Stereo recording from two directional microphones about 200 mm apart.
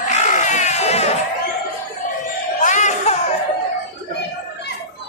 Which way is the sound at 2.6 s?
35° left (ahead or behind).